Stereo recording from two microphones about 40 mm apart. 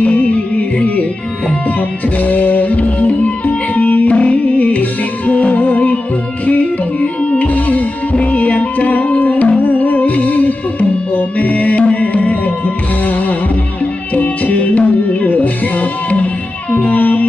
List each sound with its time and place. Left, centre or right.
0.0 s music: left